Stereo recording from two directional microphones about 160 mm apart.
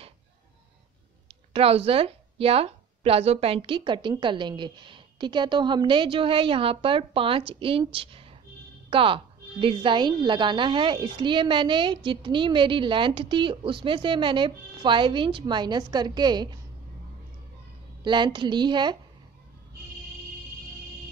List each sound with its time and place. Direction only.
1.5 s a woman's voice: 40° right (ahead or behind)
18.0 s a woman's voice: 30° right (ahead or behind)